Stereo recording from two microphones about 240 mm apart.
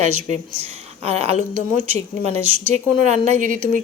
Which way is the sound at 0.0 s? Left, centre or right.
Right.